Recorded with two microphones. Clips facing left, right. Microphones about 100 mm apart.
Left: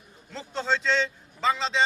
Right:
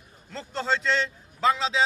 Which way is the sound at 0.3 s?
Centre (ahead or behind).